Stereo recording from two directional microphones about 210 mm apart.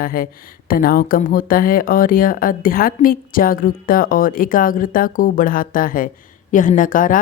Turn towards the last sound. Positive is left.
turn(degrees=40)  # may be behind; listen again after turning